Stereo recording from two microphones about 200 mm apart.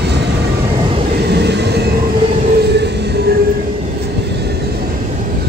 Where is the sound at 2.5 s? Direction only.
55° right (ahead or behind).